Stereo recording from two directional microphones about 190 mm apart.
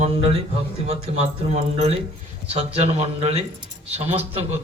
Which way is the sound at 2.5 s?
30° right (ahead or behind).